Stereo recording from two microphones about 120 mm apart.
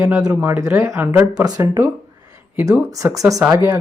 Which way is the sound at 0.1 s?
10° right (ahead or behind).